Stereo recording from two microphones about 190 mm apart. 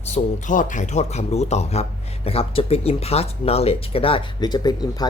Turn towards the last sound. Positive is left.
turn(degrees=20)  # may be behind; listen again after turning